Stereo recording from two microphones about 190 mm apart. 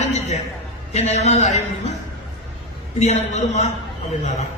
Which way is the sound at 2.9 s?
35° left (ahead or behind).